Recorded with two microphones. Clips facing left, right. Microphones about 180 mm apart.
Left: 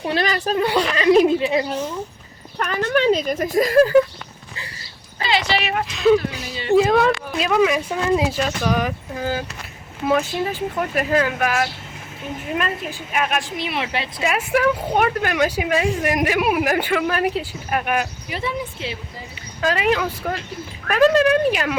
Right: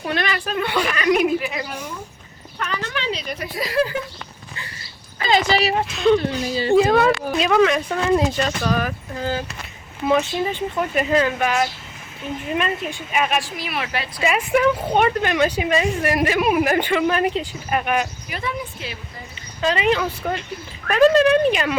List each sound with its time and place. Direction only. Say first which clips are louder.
0.0 s a woman's voice: left 3 dB; 30° left (ahead or behind)
2.6 s speech: left 8 dB; 50° left (ahead or behind)
5.2 s speech: right 3 dB; 45° right (ahead or behind)
5.8 s speech: left 5 dB; centre (ahead or behind)
13.4 s a woman's voice: left 2 dB; 25° left (ahead or behind)
14.2 s a woman's voice: right 2 dB; centre (ahead or behind)
18.3 s a woman's voice: left 2 dB; 30° left (ahead or behind)
19.6 s speech: even; 5° left (ahead or behind)